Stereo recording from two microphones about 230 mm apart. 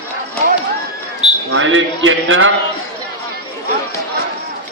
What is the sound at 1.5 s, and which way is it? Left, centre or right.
A man's voice, right.